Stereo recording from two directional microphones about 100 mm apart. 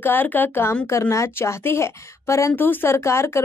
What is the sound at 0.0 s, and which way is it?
A woman's voice, 20° left (ahead or behind).